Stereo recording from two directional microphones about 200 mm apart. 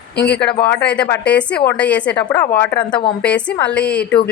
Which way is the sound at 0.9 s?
10° left (ahead or behind).